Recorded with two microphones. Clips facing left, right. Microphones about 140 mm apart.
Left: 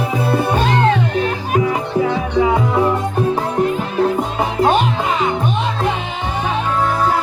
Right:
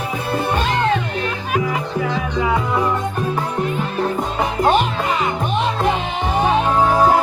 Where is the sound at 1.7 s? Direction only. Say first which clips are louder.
Left 4 dB; 20° left (ahead or behind).